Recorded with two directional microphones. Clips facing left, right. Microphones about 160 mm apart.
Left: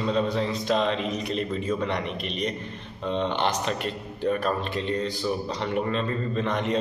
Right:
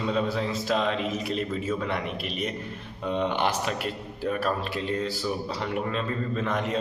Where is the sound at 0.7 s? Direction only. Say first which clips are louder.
Left 2 dB; 5° right (ahead or behind).